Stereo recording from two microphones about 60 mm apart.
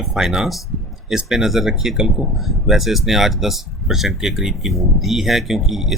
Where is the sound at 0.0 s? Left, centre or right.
Centre.